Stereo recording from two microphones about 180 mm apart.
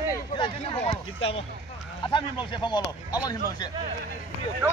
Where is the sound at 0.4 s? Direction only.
30° left (ahead or behind).